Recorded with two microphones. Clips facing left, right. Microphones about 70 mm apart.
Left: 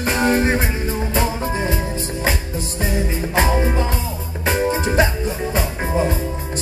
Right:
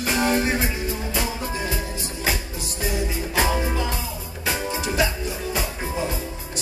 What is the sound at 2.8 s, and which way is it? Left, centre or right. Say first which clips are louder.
Music: left 3 dB; left.